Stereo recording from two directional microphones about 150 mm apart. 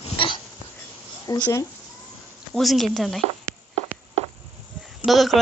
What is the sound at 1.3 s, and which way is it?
Speech, 25° left (ahead or behind).